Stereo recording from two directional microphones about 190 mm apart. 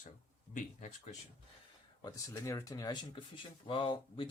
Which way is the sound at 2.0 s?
15° left (ahead or behind).